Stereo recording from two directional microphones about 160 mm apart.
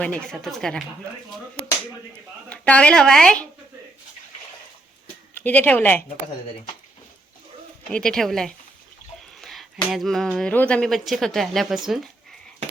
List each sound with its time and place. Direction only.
0.0 s speech: 5° left (ahead or behind)
2.5 s speech: 10° left (ahead or behind)
5.4 s speech: 10° left (ahead or behind)
7.9 s speech: 5° left (ahead or behind)
9.4 s a sound: centre (ahead or behind)
9.9 s speech: centre (ahead or behind)